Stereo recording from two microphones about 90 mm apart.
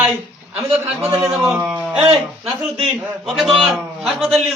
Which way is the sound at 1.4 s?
30° right (ahead or behind).